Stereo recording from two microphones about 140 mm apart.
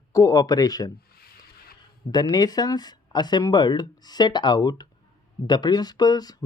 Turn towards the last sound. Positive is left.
turn(degrees=30)  # may be behind; listen again after turning